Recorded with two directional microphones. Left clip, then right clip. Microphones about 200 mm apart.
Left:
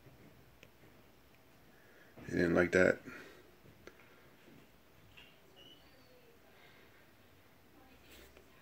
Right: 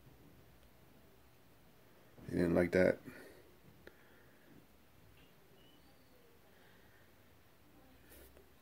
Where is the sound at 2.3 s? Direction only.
5° right (ahead or behind).